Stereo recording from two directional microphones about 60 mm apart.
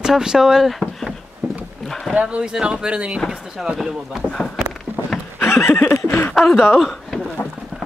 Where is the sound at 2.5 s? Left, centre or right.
Centre.